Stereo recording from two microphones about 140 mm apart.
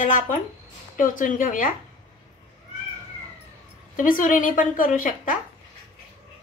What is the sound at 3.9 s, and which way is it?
A woman's voice, 75° left (ahead or behind).